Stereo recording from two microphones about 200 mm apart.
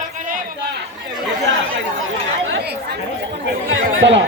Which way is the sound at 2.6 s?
55° right (ahead or behind).